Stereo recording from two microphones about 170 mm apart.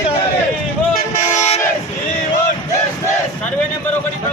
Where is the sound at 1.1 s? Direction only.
45° left (ahead or behind).